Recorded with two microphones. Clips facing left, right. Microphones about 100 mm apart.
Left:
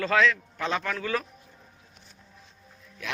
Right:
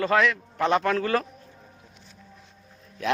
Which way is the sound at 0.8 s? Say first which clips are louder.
Right 6 dB; 45° right (ahead or behind).